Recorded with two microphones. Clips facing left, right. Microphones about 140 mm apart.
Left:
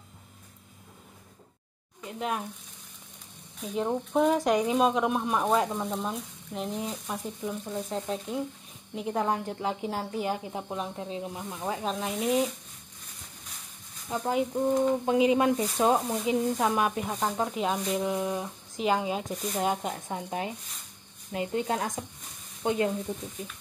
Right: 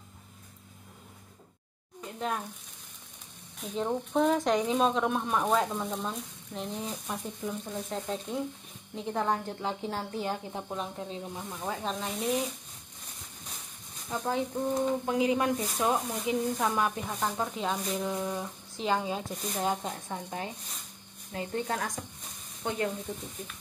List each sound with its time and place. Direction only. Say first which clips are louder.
2.0 s frying: left 2 dB; 5° left (ahead or behind)
3.6 s speech: left 2 dB; 5° left (ahead or behind)
14.2 s a woman's voice: left 4 dB; 15° left (ahead or behind)